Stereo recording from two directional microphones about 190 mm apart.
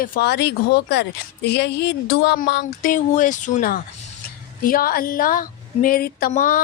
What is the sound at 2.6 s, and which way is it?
Speech, 45° left (ahead or behind).